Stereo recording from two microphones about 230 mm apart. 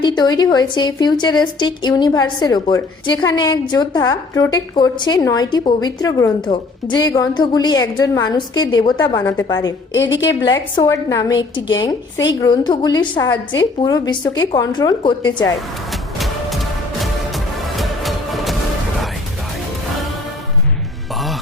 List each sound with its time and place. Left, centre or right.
0.0 s a woman's voice: centre
9.9 s a woman's voice: left
10.4 s a woman's voice: centre
15.9 s vehicle: centre
17.0 s music: centre